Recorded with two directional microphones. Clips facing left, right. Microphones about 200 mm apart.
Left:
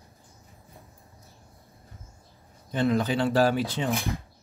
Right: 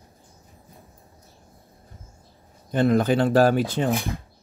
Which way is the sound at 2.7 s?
50° right (ahead or behind).